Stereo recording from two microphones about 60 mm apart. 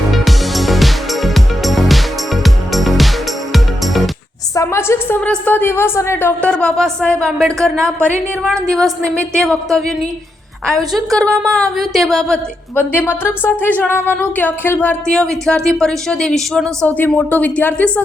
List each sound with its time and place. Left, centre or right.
0.1 s music: centre
4.5 s a sound: left
5.2 s speech: left
5.5 s speech: left
6.4 s speech: centre
7.4 s a woman's voice: centre
12.7 s speech: left
15.0 s speech: centre
16.8 s speech: left